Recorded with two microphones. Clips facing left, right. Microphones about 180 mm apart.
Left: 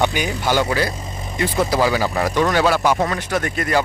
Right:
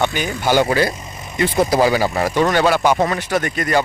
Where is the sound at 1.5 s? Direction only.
20° right (ahead or behind).